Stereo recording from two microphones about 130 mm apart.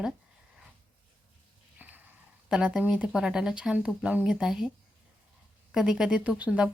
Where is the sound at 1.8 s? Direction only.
15° right (ahead or behind).